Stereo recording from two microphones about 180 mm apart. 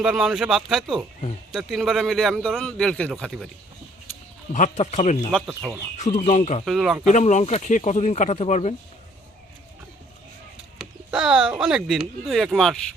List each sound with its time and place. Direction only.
0.0 s a man's voice: 5° right (ahead or behind)
4.5 s speech: 40° left (ahead or behind)
5.5 s speech: 10° right (ahead or behind)
6.0 s speech: 40° left (ahead or behind)
6.7 s a man's voice: centre (ahead or behind)
7.1 s speech: 40° left (ahead or behind)
10.8 s speech: 5° right (ahead or behind)